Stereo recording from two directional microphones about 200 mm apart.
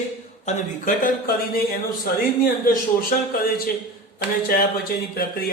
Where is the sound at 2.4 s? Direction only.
45° left (ahead or behind).